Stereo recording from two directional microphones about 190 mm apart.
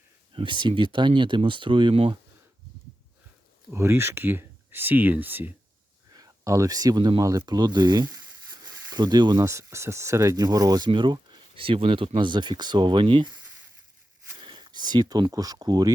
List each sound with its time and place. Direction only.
0.3 s speech: 25° right (ahead or behind)
3.7 s speech: 15° right (ahead or behind)
14.4 s speech: 25° right (ahead or behind)